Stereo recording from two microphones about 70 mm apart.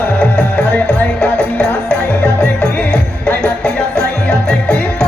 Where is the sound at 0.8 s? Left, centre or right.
Centre.